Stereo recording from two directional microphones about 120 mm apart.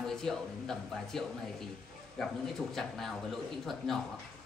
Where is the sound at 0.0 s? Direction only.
5° left (ahead or behind).